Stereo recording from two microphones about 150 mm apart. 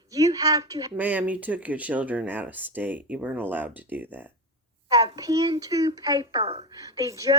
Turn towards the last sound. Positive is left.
turn(degrees=-25)  # may be behind; listen again after turning